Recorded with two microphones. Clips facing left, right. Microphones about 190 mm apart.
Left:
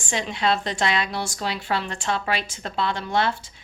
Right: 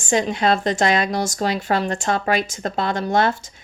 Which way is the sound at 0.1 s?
45° right (ahead or behind).